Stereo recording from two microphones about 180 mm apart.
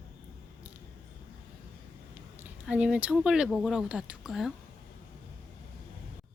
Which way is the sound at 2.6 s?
5° right (ahead or behind).